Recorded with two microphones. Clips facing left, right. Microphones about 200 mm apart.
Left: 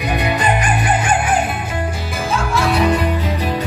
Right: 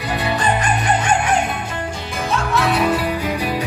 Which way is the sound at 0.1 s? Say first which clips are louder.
Left 1 dB; 15° left (ahead or behind).